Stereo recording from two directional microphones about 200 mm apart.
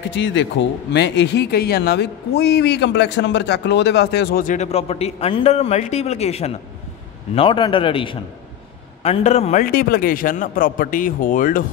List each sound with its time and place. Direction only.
0.1 s a man's voice: 65° left (ahead or behind); by 11.6 s 45° left (ahead or behind)